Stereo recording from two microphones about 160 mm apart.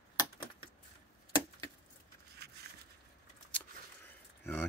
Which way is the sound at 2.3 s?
90° right.